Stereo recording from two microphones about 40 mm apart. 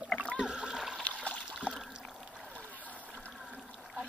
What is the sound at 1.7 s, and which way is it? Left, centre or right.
Rowboat, left.